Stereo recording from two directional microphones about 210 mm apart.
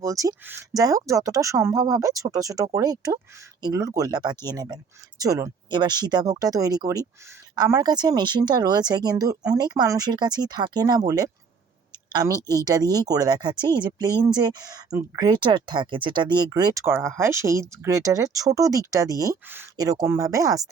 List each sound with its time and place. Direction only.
0.0 s speech: 15° right (ahead or behind)